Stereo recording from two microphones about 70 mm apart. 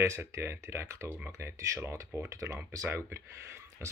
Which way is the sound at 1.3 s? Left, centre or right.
Right.